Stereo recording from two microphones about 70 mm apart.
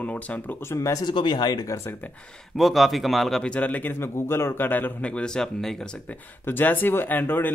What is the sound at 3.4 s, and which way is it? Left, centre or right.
Speech, centre.